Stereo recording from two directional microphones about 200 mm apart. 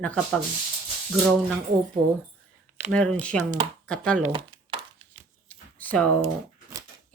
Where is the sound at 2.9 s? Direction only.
5° left (ahead or behind).